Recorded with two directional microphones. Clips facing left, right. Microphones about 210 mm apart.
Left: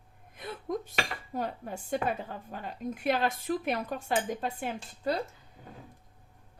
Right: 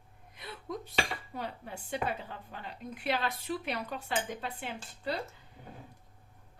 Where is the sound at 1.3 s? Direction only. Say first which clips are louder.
Left 10 dB; 45° left (ahead or behind).